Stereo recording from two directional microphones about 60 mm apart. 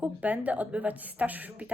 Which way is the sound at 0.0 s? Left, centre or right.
Right.